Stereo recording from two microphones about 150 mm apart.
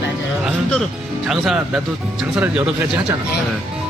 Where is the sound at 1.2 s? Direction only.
Centre (ahead or behind).